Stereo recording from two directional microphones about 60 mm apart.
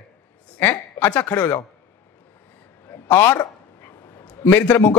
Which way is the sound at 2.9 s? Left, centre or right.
Left.